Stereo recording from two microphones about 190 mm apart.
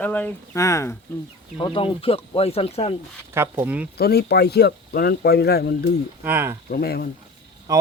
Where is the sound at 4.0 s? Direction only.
55° left (ahead or behind).